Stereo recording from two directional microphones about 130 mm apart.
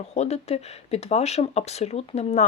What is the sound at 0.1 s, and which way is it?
Speech, 55° left (ahead or behind).